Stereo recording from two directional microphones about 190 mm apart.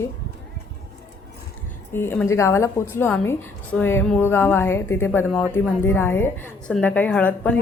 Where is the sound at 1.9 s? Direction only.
10° left (ahead or behind).